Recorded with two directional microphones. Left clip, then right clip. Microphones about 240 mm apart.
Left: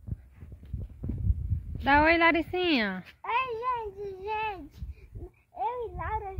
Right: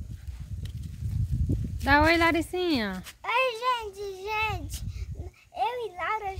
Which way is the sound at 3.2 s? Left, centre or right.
Right.